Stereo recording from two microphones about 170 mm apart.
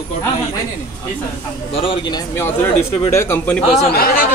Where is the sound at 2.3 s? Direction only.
15° left (ahead or behind).